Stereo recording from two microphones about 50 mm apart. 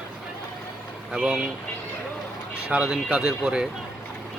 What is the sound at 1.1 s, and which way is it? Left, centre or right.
Speech, centre.